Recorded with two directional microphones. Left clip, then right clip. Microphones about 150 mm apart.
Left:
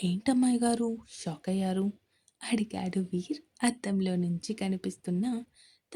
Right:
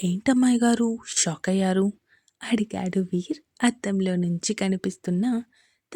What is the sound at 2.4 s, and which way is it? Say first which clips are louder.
Speech: right 6 dB; 35° right (ahead or behind).